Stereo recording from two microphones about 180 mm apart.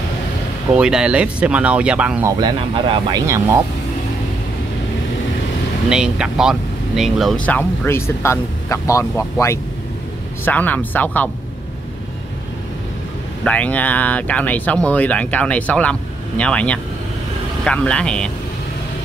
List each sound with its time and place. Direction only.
0.7 s speech: 5° right (ahead or behind)
2.4 s speech: 25° right (ahead or behind)
5.9 s speech: 5° right (ahead or behind)
13.4 s speech: 5° left (ahead or behind)